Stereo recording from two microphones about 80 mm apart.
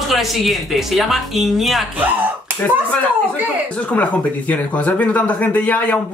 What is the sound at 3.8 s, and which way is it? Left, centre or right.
Speech, centre.